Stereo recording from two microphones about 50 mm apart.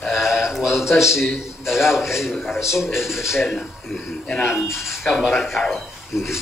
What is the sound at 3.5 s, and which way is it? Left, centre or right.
Speech, centre.